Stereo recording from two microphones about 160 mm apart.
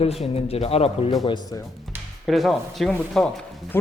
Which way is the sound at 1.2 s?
25° left (ahead or behind).